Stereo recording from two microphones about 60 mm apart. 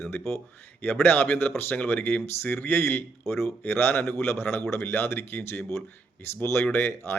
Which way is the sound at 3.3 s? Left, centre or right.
Left.